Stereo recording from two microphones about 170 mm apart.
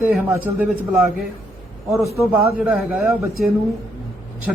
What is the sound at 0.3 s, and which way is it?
Speech, 10° right (ahead or behind).